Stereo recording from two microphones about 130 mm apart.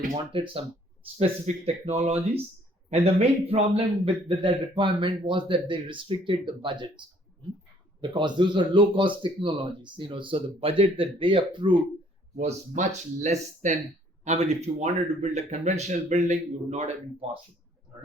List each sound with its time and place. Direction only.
0.3 s a man's voice: 45° right (ahead or behind)
8.0 s a man's voice: 35° right (ahead or behind)
12.4 s speech: 65° right (ahead or behind)